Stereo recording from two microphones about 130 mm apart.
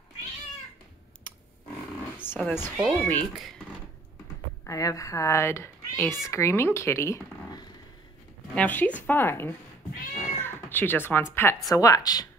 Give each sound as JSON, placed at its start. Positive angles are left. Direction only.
{"t": 2.2, "sound": "a woman's voice", "side_deg": 15}
{"t": 4.6, "sound": "speech", "side_deg": 25}
{"t": 8.5, "sound": "speech", "side_deg": 10}
{"t": 10.4, "sound": "cat", "side_deg": 15}
{"t": 11.3, "sound": "speech", "side_deg": 20}